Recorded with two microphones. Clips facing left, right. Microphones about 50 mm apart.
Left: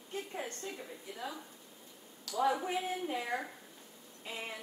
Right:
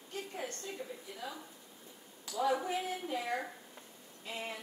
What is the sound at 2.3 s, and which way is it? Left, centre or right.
Speech, right.